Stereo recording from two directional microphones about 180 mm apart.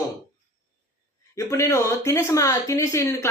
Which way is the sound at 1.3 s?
15° left (ahead or behind).